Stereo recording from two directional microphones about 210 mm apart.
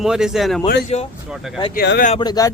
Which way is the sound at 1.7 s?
45° left (ahead or behind).